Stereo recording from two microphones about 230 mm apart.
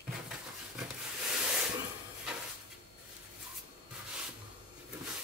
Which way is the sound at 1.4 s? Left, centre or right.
Centre.